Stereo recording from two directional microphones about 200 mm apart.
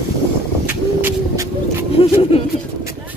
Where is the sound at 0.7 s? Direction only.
15° right (ahead or behind).